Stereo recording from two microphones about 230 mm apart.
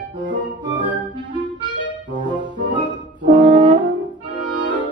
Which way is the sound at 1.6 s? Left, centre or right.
Centre.